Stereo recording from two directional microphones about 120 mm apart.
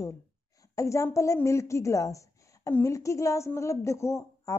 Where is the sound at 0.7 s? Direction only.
25° left (ahead or behind).